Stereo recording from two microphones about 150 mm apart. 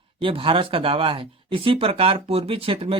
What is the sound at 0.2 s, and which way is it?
Speech, 35° right (ahead or behind).